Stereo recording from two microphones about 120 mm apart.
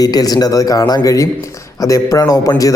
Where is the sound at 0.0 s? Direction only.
30° left (ahead or behind).